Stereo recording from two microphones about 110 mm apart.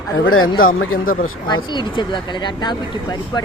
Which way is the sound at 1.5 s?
45° left (ahead or behind).